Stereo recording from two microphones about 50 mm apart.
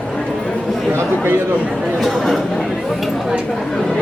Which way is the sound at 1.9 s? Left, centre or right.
Centre.